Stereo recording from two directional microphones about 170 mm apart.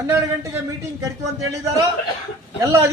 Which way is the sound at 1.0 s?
20° right (ahead or behind).